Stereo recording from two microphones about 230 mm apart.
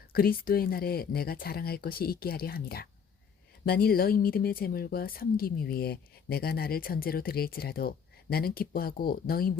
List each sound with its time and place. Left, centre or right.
0.1 s a woman's voice: left